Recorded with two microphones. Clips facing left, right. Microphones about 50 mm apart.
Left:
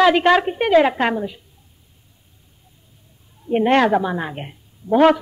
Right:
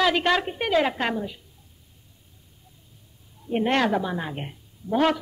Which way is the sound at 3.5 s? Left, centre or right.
Centre.